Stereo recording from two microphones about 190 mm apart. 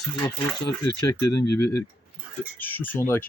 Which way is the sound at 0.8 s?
15° left (ahead or behind).